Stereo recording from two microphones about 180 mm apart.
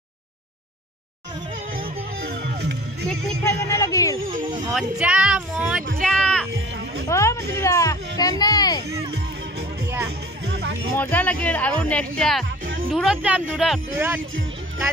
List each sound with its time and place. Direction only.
2.1 s music: 60° right (ahead or behind)
3.1 s music: 5° left (ahead or behind)
3.6 s music: 15° left (ahead or behind)
4.7 s speech: 5° right (ahead or behind)
5.9 s music: centre (ahead or behind)
7.1 s a sound: 15° left (ahead or behind)
10.0 s music: 70° right (ahead or behind)
11.0 s speech: 10° left (ahead or behind)